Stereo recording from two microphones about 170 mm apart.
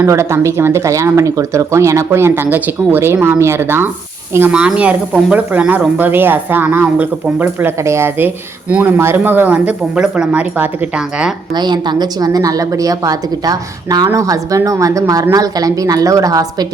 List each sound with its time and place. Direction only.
0.0 s speech: 15° right (ahead or behind)
11.5 s a woman's voice: 25° right (ahead or behind)